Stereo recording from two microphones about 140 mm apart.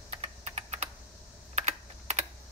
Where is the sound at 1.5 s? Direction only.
55° right (ahead or behind).